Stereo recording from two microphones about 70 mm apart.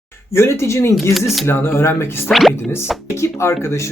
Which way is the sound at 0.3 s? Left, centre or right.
Left.